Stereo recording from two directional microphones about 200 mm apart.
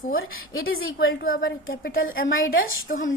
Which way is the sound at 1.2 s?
45° left (ahead or behind).